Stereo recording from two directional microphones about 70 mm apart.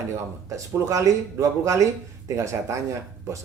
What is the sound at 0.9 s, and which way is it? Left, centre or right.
Speech, right.